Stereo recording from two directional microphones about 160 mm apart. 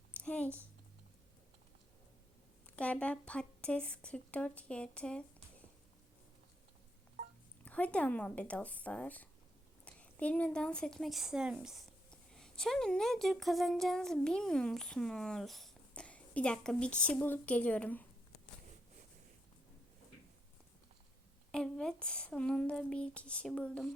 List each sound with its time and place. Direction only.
0.1 s a sound: 10° left (ahead or behind)
2.6 s a woman's voice: 10° left (ahead or behind)
7.6 s a woman's voice: 10° left (ahead or behind)
21.5 s a woman's voice: 5° left (ahead or behind)